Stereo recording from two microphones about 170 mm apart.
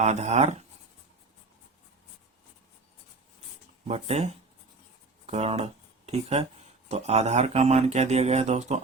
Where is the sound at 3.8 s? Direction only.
40° right (ahead or behind).